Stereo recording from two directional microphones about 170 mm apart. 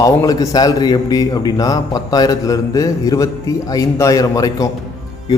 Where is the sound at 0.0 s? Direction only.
20° left (ahead or behind).